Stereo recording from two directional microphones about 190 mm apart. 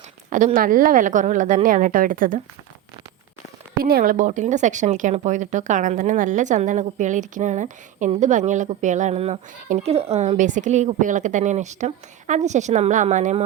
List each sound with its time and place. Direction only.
0.3 s a woman's voice: 45° right (ahead or behind)
3.8 s speech: 50° right (ahead or behind)